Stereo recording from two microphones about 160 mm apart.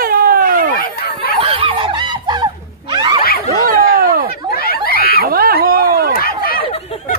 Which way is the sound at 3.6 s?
65° right (ahead or behind).